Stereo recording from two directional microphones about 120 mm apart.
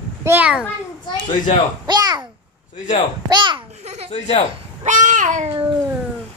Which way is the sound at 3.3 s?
40° right (ahead or behind).